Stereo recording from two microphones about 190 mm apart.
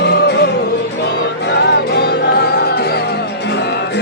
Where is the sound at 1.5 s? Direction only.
60° left (ahead or behind).